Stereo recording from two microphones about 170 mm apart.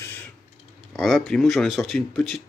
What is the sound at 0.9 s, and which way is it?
Speech, centre (ahead or behind).